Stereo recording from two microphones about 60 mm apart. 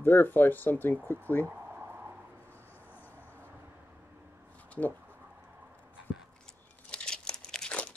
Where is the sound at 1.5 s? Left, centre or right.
Right.